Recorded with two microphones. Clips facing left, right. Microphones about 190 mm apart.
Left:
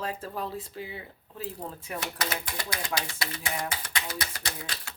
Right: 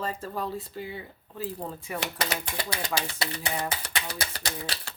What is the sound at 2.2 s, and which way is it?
Speech, 30° right (ahead or behind).